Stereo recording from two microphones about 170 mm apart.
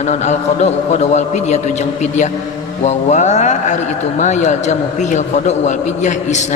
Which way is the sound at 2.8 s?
45° left (ahead or behind).